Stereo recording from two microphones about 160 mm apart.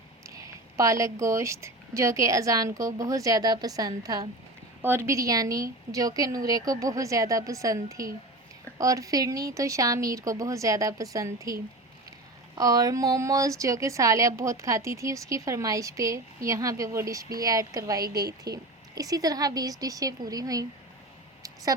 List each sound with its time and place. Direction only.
0.3 s a woman's voice: 20° right (ahead or behind)
12.5 s a woman's voice: 20° right (ahead or behind)
18.1 s a woman's voice: 75° right (ahead or behind)
18.9 s a woman's voice: 20° right (ahead or behind)